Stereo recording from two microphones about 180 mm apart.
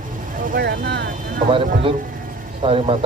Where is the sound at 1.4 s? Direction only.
50° right (ahead or behind).